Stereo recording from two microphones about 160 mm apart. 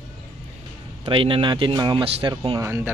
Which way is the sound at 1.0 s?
30° right (ahead or behind).